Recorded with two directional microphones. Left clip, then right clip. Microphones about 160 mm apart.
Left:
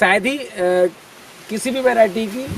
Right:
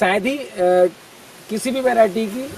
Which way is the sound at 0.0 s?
Centre (ahead or behind).